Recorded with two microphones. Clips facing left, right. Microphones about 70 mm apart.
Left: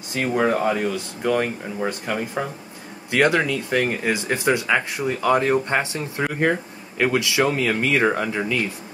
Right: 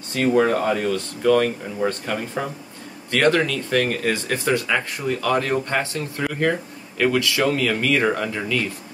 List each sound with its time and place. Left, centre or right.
0.1 s speech: centre